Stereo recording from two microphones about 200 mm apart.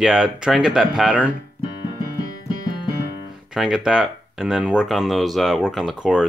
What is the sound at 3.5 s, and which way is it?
Speech, 5° right (ahead or behind).